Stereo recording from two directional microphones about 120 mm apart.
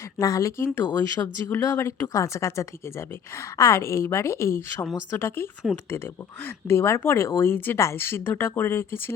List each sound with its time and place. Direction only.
0.2 s speech: 25° left (ahead or behind)
1.5 s speech: 20° left (ahead or behind)
5.7 s speech: centre (ahead or behind)
6.4 s speech: 20° left (ahead or behind)